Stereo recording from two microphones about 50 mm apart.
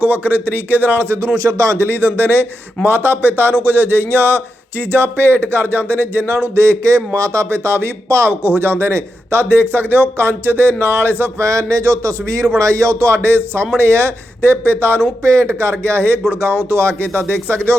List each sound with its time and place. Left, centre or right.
0.0 s a man's voice: right
1.4 s a man's voice: right
1.9 s a man's voice: right
7.2 s speech: right
8.3 s speech: right
11.4 s a man's voice: right
15.2 s a man's voice: right
15.8 s speech: right
16.3 s speech: right